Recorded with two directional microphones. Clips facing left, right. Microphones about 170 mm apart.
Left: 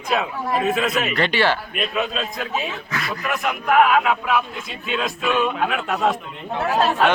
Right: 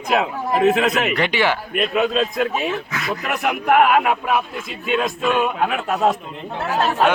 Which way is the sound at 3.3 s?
60° right (ahead or behind).